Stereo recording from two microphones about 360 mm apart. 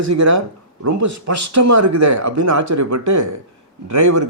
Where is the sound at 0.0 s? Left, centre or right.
Right.